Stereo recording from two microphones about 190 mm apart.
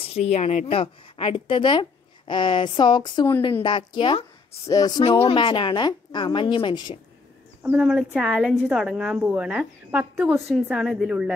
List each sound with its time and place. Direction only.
0.0 s a woman's voice: 35° left (ahead or behind)
7.6 s a woman's voice: 5° right (ahead or behind)